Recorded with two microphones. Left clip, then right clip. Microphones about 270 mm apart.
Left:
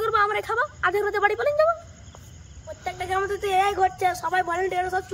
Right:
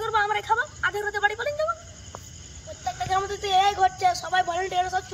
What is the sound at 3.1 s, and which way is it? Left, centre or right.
Speech, centre.